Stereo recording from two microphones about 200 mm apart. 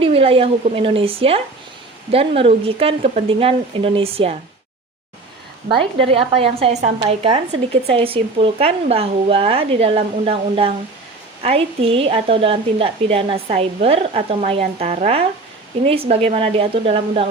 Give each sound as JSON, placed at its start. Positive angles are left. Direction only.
{"t": 0.0, "sound": "a woman's voice", "side_deg": -30}
{"t": 6.1, "sound": "a woman's voice", "side_deg": -30}